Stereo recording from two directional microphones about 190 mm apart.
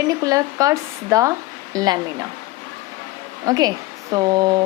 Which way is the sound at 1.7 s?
20° right (ahead or behind).